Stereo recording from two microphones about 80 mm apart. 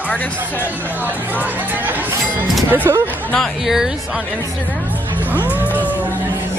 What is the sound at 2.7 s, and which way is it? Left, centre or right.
Speech, right.